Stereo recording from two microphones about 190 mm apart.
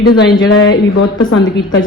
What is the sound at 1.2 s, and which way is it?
Speech, 20° left (ahead or behind).